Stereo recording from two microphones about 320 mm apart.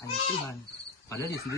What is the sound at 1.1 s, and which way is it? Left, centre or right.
Cricket, centre.